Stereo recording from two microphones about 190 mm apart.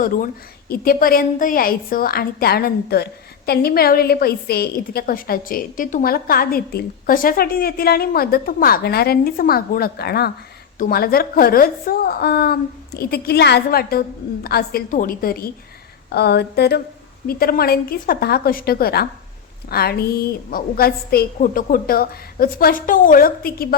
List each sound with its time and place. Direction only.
0.7 s a woman's voice: 50° left (ahead or behind)